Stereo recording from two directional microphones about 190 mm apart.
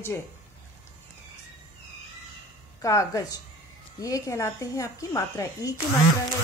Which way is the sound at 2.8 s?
15° left (ahead or behind).